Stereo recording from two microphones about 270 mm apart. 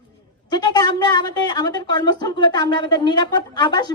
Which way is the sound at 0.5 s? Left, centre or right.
Centre.